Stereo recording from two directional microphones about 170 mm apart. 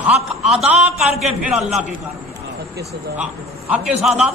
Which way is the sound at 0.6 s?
5° right (ahead or behind).